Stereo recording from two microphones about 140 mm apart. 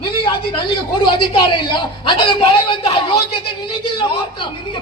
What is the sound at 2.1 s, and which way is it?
Speech, 40° left (ahead or behind).